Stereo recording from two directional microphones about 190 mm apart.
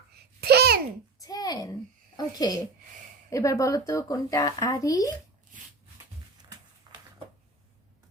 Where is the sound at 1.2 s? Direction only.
20° left (ahead or behind).